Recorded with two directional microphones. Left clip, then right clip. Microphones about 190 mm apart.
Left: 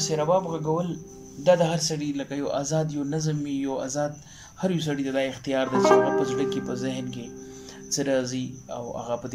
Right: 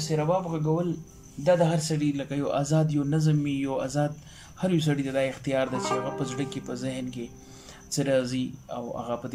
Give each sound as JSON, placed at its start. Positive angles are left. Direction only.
{"t": 0.0, "sound": "speech", "side_deg": 5}
{"t": 5.8, "sound": "speech", "side_deg": 40}
{"t": 6.1, "sound": "speech", "side_deg": 0}